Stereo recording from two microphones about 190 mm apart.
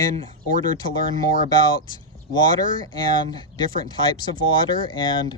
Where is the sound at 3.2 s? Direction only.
25° left (ahead or behind).